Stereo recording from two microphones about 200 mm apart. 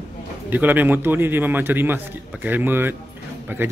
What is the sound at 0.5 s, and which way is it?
A woman's voice, 10° right (ahead or behind).